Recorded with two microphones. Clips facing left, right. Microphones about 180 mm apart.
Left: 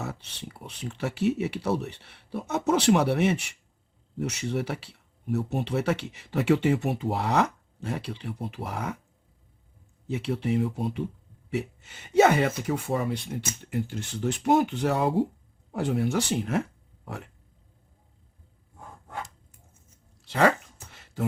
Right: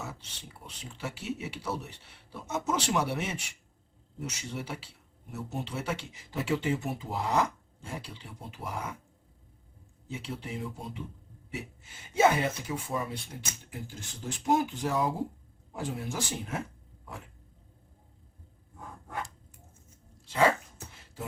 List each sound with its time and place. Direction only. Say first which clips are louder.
0.0 s speech: left 6 dB; 65° left (ahead or behind)
10.1 s speech: left 11 dB; 65° left (ahead or behind)
20.2 s speech: left 3 dB; 70° left (ahead or behind)
20.9 s beatboxing: left 10 dB; 75° left (ahead or behind)